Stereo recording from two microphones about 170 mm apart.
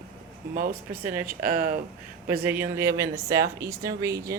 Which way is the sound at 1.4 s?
55° right (ahead or behind).